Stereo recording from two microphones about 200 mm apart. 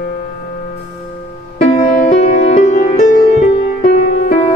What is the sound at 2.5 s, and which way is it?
Music, 35° left (ahead or behind).